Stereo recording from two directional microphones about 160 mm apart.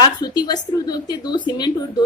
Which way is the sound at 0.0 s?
25° left (ahead or behind).